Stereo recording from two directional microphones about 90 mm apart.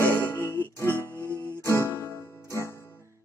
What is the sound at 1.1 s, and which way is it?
Music, 30° right (ahead or behind).